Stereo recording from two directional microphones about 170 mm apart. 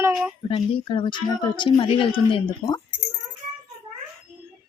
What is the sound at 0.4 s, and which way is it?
A woman's voice, 30° left (ahead or behind).